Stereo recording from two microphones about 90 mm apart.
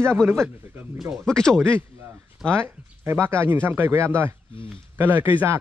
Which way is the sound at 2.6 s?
25° right (ahead or behind).